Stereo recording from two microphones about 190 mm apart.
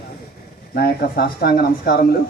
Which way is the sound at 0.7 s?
50° left (ahead or behind).